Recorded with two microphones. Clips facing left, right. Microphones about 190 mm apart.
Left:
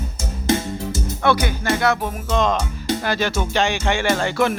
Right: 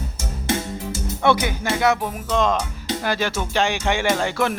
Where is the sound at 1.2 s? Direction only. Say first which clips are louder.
Even; 20° right (ahead or behind).